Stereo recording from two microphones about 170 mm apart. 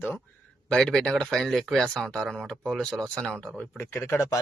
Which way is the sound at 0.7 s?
5° left (ahead or behind).